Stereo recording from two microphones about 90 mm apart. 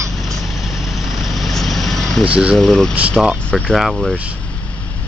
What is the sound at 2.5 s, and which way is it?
Speech, 5° left (ahead or behind).